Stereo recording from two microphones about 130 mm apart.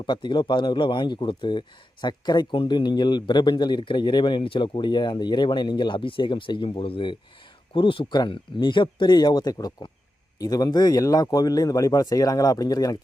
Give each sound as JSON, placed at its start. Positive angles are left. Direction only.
{"t": 0.0, "sound": "speech", "side_deg": 35}